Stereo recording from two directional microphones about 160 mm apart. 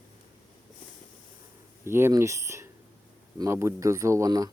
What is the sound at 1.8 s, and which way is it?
Speech, 15° right (ahead or behind).